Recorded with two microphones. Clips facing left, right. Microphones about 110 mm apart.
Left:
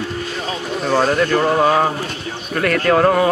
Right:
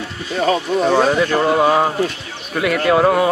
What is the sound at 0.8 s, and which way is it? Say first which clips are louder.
Speech: even; 5° right (ahead or behind).